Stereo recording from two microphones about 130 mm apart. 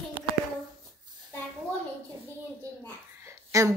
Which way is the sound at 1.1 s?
35° right (ahead or behind).